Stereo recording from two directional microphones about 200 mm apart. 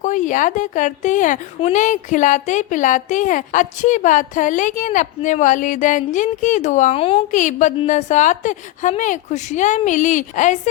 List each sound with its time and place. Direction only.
0.0 s a woman's voice: 40° left (ahead or behind)